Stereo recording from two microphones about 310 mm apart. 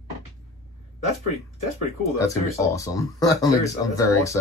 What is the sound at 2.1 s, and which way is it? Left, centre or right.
Speech, centre.